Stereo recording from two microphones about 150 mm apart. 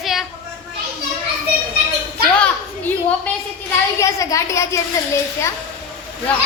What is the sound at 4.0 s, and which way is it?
Speech, 20° left (ahead or behind).